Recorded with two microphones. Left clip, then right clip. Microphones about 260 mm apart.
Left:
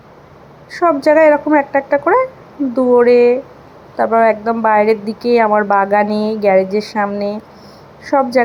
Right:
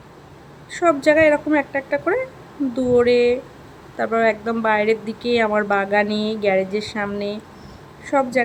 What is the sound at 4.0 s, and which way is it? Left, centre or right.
Speech, centre.